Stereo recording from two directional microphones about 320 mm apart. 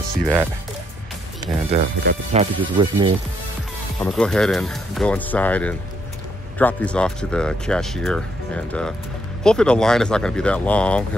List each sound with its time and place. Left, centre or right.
0.1 s speech: centre
1.7 s speech: right
4.0 s speech: centre
9.4 s speech: centre